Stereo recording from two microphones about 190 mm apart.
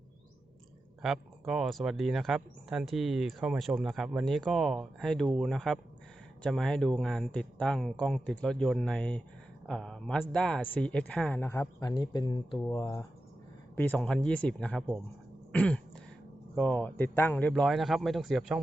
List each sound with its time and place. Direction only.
1.0 s speech: centre (ahead or behind)
15.5 s throat clearing: 5° left (ahead or behind)
16.6 s speech: 10° left (ahead or behind)